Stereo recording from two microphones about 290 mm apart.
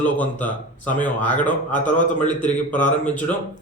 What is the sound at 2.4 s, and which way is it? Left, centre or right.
Speech, left.